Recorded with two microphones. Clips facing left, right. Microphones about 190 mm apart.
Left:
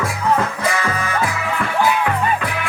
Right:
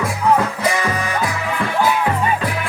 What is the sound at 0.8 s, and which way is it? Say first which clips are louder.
Music: right 1 dB; 15° right (ahead or behind).